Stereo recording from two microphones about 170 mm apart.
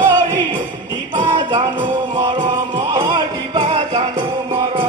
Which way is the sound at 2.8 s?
25° right (ahead or behind).